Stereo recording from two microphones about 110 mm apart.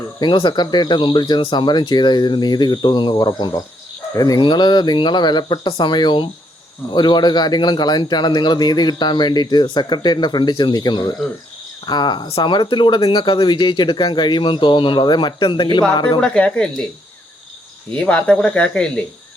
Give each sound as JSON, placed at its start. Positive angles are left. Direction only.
{"t": 0.2, "sound": "speech", "side_deg": 45}
{"t": 4.4, "sound": "speech", "side_deg": 45}
{"t": 16.2, "sound": "speech", "side_deg": 10}
{"t": 17.9, "sound": "speech", "side_deg": 10}